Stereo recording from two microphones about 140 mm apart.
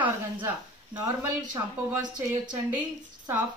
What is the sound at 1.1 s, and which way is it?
Speech, 25° right (ahead or behind).